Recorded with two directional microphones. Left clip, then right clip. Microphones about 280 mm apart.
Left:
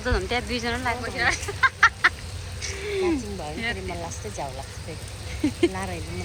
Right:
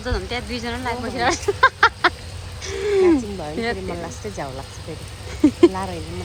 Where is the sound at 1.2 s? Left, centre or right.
Centre.